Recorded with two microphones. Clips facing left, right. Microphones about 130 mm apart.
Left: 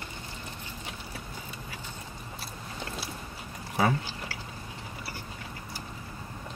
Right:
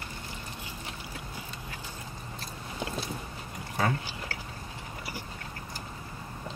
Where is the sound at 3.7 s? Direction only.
10° left (ahead or behind).